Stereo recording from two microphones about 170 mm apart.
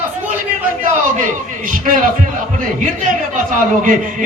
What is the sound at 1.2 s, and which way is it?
Speech, 50° right (ahead or behind).